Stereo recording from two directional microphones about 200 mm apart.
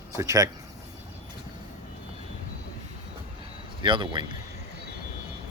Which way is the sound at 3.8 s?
25° right (ahead or behind).